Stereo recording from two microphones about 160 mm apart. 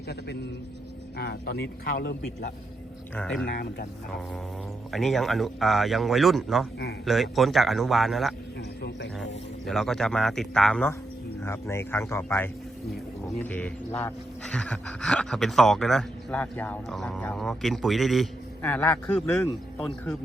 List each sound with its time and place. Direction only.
1.2 s a man's voice: 85° left; by 2.5 s 70° left (ahead or behind)
3.2 s speech: 5° left (ahead or behind)
3.4 s a man's voice: 75° left (ahead or behind)
4.9 s speech: centre (ahead or behind)
9.6 s speech: centre (ahead or behind)
11.4 s speech: 15° left (ahead or behind); by 18.3 s centre (ahead or behind)
18.6 s speech: 10° left (ahead or behind)